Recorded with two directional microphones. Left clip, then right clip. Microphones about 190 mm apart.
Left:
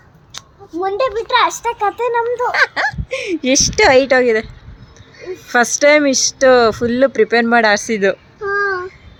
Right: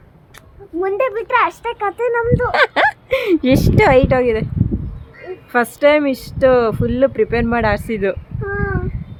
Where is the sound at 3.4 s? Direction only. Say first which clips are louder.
Left 1 dB; 15° right (ahead or behind).